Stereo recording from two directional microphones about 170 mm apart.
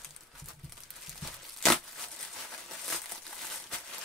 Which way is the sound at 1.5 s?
Centre (ahead or behind).